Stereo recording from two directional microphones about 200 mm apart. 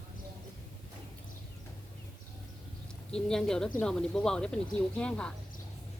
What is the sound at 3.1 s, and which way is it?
Speech, 5° left (ahead or behind).